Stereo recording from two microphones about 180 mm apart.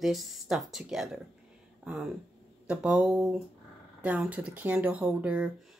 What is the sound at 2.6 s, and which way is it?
Speech, 5° right (ahead or behind).